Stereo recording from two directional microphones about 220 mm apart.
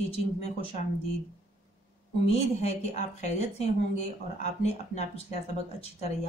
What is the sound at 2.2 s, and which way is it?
A woman's voice, 30° left (ahead or behind).